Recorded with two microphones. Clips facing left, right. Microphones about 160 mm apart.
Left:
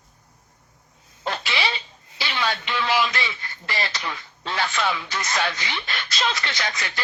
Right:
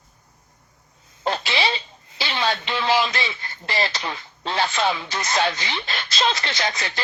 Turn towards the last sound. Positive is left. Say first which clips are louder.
# right 3 dB
turn(degrees=-30)  # may be behind; listen again after turning